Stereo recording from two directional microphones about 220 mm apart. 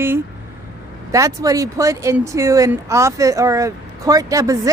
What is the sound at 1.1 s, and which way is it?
Speech, 15° right (ahead or behind).